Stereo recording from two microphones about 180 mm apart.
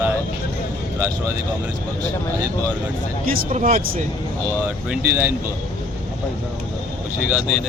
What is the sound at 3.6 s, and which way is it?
Speech, 50° right (ahead or behind).